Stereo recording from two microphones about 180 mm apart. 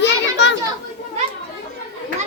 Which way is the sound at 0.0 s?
75° left (ahead or behind).